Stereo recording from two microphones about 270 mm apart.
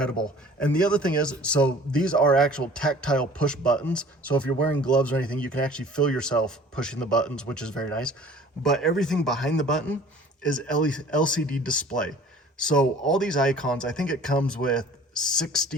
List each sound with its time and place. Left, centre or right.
0.0 s a man's voice: centre